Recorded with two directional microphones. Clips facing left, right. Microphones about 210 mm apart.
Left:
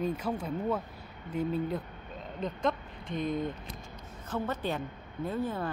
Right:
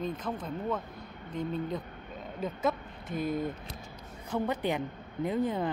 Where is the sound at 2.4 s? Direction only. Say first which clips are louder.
Even; 5° right (ahead or behind).